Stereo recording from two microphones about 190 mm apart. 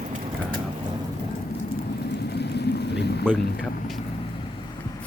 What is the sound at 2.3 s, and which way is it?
Vehicle, 60° left (ahead or behind).